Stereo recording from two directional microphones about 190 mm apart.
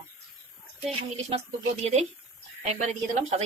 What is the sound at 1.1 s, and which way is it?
A woman's voice, 35° right (ahead or behind).